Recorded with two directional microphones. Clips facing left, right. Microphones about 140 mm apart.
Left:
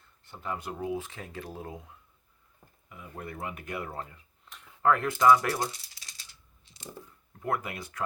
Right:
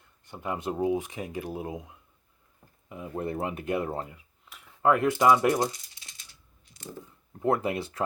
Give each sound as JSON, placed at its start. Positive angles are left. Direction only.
{"t": 0.3, "sound": "speech", "side_deg": -15}
{"t": 4.1, "sound": "a sound", "side_deg": -5}
{"t": 4.8, "sound": "speech", "side_deg": -20}
{"t": 5.8, "sound": "rattle", "side_deg": 35}
{"t": 7.4, "sound": "speech", "side_deg": -25}